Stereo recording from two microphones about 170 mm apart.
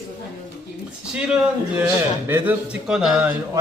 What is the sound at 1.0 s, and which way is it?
Speech, 5° right (ahead or behind).